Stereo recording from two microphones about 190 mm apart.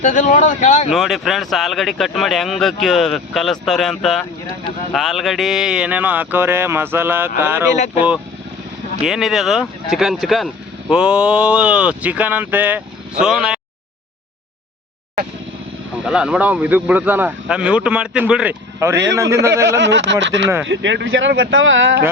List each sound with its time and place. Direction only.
0.0 s speech: 40° left (ahead or behind)
0.9 s speech: centre (ahead or behind)
9.0 s speech: centre (ahead or behind)
16.0 s speech: 5° right (ahead or behind)
19.8 s speech: 70° right (ahead or behind)